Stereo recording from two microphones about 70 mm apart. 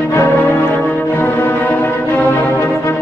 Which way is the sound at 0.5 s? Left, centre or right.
Left.